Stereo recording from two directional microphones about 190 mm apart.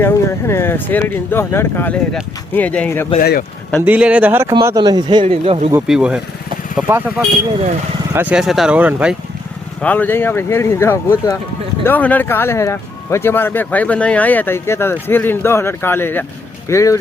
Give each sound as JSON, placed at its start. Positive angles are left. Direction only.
{"t": 0.0, "sound": "speech", "side_deg": 15}
{"t": 3.2, "sound": "speech", "side_deg": 55}
{"t": 3.8, "sound": "speech", "side_deg": -5}
{"t": 5.9, "sound": "speech", "side_deg": -5}
{"t": 8.1, "sound": "speech", "side_deg": -10}
{"t": 9.8, "sound": "speech", "side_deg": 10}